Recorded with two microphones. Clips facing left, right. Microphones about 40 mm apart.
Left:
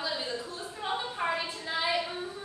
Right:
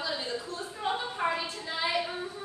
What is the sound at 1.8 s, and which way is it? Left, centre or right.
Child singing, centre.